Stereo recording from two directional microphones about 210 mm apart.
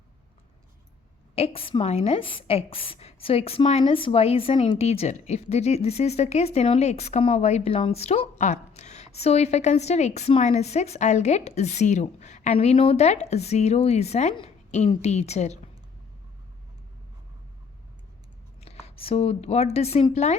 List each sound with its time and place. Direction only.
1.4 s a woman's voice: 25° left (ahead or behind)
18.6 s a woman's voice: 30° left (ahead or behind)